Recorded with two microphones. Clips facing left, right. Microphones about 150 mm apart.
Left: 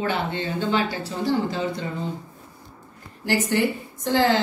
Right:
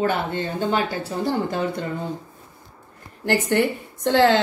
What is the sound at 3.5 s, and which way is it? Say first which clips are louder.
Speech: right 2 dB; 55° right (ahead or behind).